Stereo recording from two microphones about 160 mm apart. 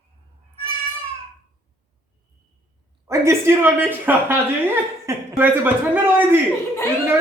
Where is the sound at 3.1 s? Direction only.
15° right (ahead or behind).